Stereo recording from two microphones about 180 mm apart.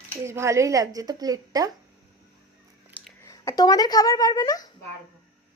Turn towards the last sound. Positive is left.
turn(degrees=20)  # may be behind; listen again after turning